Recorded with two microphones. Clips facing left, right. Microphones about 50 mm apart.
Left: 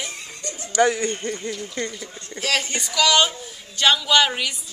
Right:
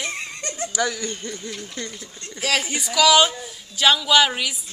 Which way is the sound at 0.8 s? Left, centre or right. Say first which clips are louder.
Left 7 dB; left.